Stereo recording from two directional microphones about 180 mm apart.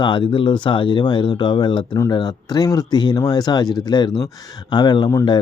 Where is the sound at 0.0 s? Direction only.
25° left (ahead or behind).